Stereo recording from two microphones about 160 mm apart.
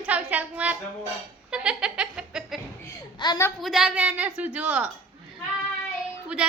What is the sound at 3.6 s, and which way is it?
A woman's voice, centre (ahead or behind).